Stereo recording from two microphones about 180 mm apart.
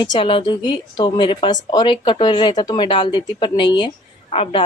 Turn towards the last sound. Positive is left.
turn(degrees=30)  # may be behind; listen again after turning